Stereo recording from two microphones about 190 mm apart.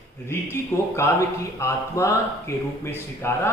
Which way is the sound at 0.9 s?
15° left (ahead or behind).